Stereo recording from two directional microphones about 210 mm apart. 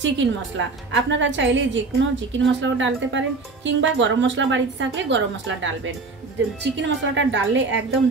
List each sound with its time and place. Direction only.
0.0 s a woman's voice: 60° right (ahead or behind)